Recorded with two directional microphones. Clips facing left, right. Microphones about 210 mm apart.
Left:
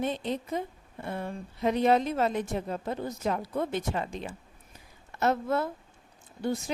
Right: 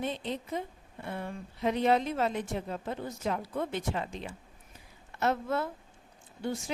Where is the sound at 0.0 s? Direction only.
45° left (ahead or behind).